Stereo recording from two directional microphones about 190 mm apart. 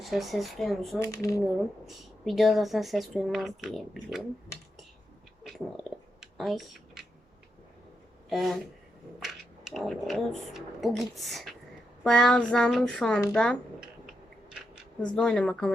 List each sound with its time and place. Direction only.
0.0 s speech: centre (ahead or behind)
0.9 s speech: 15° left (ahead or behind)
1.9 s speech: centre (ahead or behind)
5.4 s a sound: centre (ahead or behind)
8.3 s speech: centre (ahead or behind)
15.0 s speech: 5° left (ahead or behind)